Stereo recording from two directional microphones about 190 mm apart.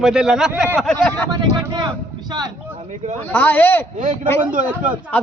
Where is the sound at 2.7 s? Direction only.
40° right (ahead or behind).